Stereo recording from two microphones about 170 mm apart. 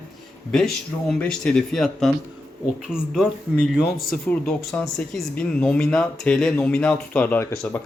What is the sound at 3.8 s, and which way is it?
Speech, 60° left (ahead or behind).